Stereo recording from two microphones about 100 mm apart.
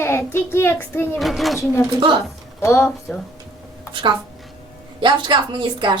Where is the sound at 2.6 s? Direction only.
30° left (ahead or behind).